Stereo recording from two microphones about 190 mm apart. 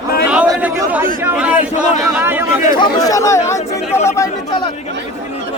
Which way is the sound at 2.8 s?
20° left (ahead or behind).